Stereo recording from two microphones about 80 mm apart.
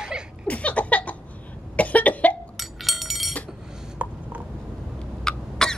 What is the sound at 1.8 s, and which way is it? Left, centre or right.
Cough, centre.